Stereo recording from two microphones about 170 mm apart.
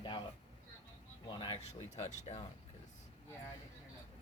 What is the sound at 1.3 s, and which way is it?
Speech, 30° left (ahead or behind).